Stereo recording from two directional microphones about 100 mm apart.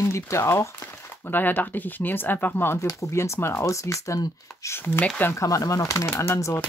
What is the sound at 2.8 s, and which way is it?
Speech, 35° left (ahead or behind).